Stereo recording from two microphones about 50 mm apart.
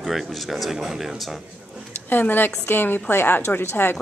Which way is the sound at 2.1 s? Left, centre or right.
Left.